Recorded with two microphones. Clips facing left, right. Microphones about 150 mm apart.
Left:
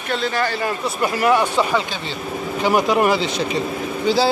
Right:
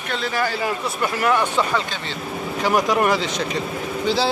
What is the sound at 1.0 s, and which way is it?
Speech, 10° left (ahead or behind).